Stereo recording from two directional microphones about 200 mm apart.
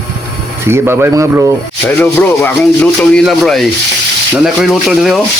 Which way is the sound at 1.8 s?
10° left (ahead or behind).